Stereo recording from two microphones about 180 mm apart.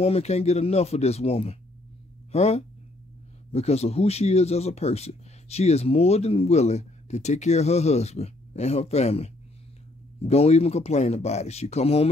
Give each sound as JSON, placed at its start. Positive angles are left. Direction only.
{"t": 0.0, "sound": "speech", "side_deg": 35}